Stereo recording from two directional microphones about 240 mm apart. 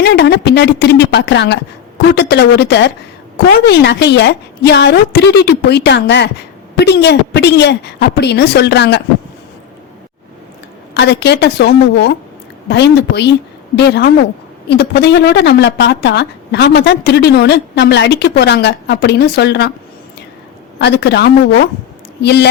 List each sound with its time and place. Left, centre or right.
0.0 s a woman's voice: left
10.9 s a woman's voice: left
20.7 s a woman's voice: left